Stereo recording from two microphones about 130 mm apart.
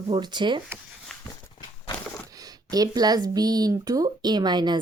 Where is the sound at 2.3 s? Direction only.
30° right (ahead or behind).